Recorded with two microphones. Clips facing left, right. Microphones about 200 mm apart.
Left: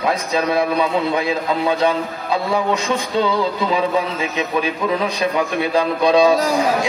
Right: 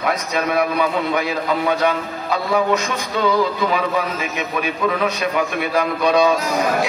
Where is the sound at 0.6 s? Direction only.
30° left (ahead or behind).